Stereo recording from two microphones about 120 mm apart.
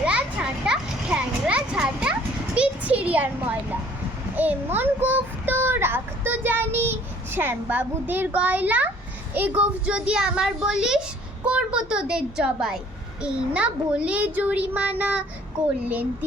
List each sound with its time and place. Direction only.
0.0 s children playing: 10° right (ahead or behind)
2.6 s a sound: 10° right (ahead or behind)
4.4 s a child's voice: 15° right (ahead or behind)